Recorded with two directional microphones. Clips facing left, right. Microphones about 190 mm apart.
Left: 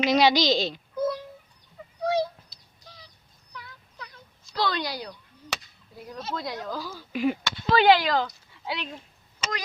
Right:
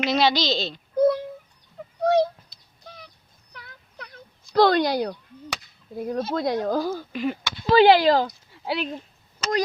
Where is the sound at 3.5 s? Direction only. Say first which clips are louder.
Even; 55° right (ahead or behind).